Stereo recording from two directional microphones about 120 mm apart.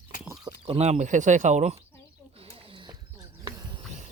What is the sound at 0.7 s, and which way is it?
Speech, 65° right (ahead or behind).